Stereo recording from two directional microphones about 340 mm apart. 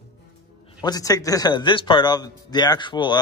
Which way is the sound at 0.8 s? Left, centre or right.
Centre.